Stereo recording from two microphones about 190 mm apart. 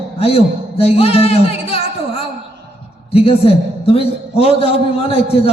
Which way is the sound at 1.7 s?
30° left (ahead or behind).